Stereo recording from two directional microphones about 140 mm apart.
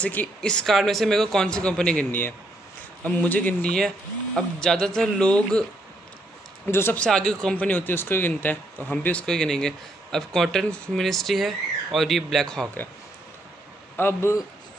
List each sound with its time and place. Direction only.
0.0 s a man's voice: 10° left (ahead or behind)
6.7 s speech: 15° left (ahead or behind)
13.9 s a man's voice: 15° left (ahead or behind)